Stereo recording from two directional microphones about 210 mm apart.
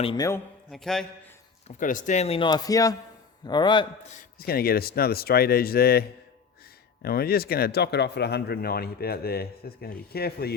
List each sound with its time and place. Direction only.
0.0 s speech: 25° left (ahead or behind)
0.7 s a man's voice: centre (ahead or behind)
1.6 s speech: 40° left (ahead or behind); by 3.8 s 20° left (ahead or behind)
4.1 s speech: 40° left (ahead or behind)